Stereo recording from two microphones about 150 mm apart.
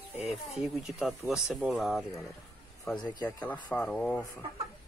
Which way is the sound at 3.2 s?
10° left (ahead or behind).